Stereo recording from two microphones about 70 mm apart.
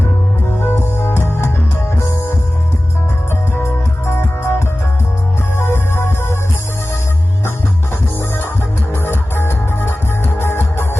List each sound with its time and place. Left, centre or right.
0.6 s music: left
3.5 s music: left
5.5 s music: left
8.9 s music: left